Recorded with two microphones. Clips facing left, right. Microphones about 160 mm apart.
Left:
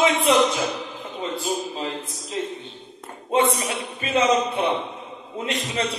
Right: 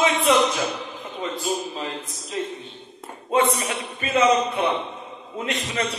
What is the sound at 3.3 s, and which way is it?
Speech, 25° left (ahead or behind).